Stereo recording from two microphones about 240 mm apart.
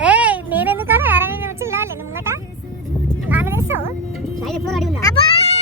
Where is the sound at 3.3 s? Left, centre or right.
Centre.